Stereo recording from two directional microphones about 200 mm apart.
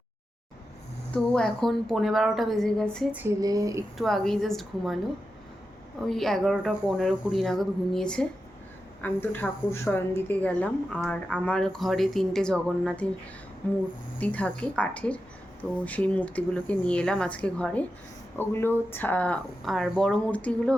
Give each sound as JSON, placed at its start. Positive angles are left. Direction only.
{"t": 1.1, "sound": "a woman's voice", "side_deg": 5}
{"t": 3.9, "sound": "a woman's voice", "side_deg": 0}
{"t": 6.1, "sound": "a woman's voice", "side_deg": 0}